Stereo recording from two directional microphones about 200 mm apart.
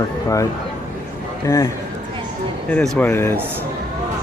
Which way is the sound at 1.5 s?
15° left (ahead or behind).